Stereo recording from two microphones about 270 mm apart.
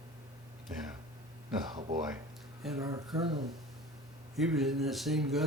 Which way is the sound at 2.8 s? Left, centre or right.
Centre.